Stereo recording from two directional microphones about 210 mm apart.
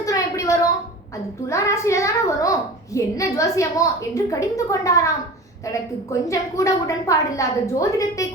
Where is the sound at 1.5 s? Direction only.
15° left (ahead or behind).